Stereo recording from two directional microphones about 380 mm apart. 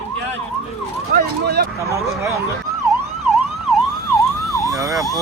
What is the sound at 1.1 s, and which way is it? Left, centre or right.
Vehicle, right.